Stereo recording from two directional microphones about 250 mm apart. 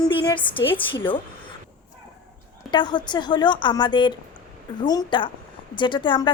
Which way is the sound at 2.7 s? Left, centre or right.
Centre.